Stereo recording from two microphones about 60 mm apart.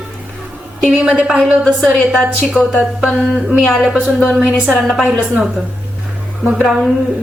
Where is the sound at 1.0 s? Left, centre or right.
Centre.